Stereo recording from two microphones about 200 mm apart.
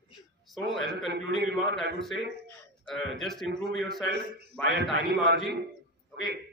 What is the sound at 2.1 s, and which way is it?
Speech, 70° left (ahead or behind).